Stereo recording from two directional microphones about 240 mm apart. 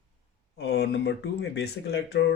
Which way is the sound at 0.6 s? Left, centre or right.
Left.